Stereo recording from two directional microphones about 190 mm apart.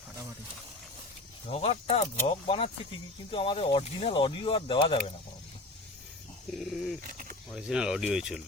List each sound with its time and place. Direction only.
1.5 s speech: 30° left (ahead or behind)
6.5 s speech: centre (ahead or behind)
7.0 s a sound: 45° right (ahead or behind)
7.5 s speech: 5° right (ahead or behind)